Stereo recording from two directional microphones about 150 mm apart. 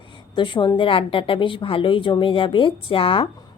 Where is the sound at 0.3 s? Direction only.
30° left (ahead or behind).